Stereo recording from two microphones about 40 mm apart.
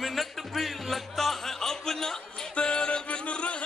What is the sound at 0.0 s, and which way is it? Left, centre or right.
Music, centre.